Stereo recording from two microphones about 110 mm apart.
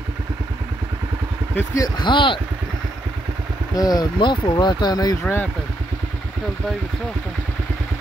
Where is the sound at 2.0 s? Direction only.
45° left (ahead or behind).